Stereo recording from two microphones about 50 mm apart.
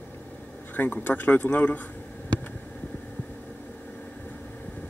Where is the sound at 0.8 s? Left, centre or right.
Left.